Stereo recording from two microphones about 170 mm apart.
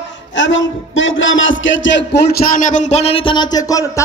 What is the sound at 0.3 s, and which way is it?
A man's voice, 90° left.